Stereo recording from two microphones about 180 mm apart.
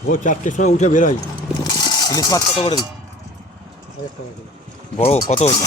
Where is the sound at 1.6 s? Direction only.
25° left (ahead or behind).